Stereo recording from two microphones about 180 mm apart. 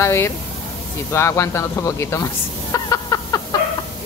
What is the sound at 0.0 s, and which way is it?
Speech, 15° left (ahead or behind).